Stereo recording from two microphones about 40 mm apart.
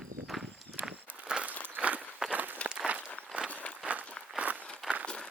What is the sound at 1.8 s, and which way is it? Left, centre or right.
Walk, right.